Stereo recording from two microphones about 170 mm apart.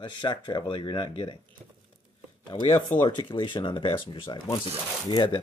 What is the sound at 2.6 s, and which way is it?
Speech, 30° left (ahead or behind).